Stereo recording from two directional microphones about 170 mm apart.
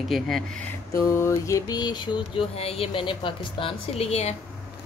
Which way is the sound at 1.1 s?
15° left (ahead or behind).